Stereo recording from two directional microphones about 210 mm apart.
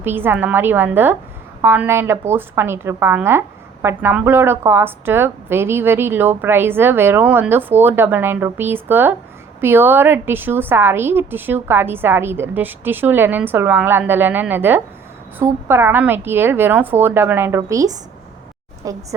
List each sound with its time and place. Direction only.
0.0 s a woman's voice: 10° right (ahead or behind)